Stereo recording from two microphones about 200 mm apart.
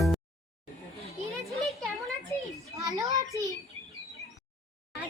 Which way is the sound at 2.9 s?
20° right (ahead or behind).